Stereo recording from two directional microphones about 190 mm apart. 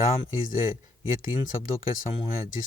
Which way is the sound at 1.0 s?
90° left.